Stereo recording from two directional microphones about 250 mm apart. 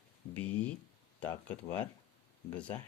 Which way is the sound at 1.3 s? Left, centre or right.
Centre.